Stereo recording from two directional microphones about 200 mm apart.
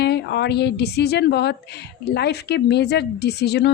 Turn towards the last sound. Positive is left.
turn(degrees=55)  # may be behind; listen again after turning